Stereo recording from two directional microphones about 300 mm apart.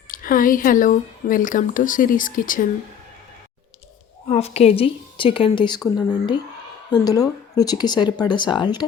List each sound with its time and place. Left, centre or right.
0.1 s speech: left
4.3 s speech: left